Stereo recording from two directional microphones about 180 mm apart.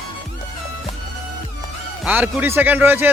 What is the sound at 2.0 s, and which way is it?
Speech, 10° right (ahead or behind).